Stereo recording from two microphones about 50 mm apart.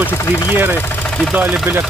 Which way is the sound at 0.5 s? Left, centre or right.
Right.